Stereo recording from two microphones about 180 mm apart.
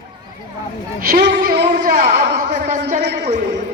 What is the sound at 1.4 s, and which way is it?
Speech, 55° right (ahead or behind).